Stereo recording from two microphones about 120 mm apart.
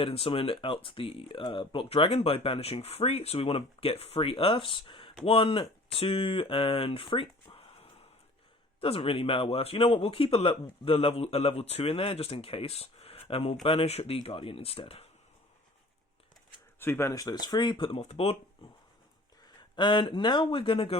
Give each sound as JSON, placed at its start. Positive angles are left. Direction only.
{"t": 0.0, "sound": "speech", "side_deg": 50}
{"t": 16.8, "sound": "speech", "side_deg": 20}
{"t": 18.0, "sound": "speech", "side_deg": 60}
{"t": 19.7, "sound": "speech", "side_deg": 40}